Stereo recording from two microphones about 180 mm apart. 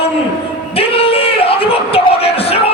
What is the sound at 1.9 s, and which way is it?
Music, 35° left (ahead or behind).